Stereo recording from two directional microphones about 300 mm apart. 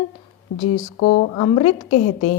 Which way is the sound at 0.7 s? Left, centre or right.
Left.